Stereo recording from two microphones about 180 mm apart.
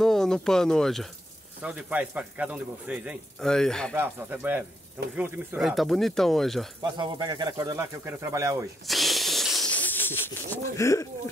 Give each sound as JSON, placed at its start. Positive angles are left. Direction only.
{"t": 0.0, "sound": "speech", "side_deg": 0}
{"t": 3.3, "sound": "speech", "side_deg": 5}
{"t": 3.9, "sound": "speech", "side_deg": -10}
{"t": 5.6, "sound": "speech", "side_deg": 0}
{"t": 6.8, "sound": "speech", "side_deg": -25}
{"t": 8.8, "sound": "a sound", "side_deg": 0}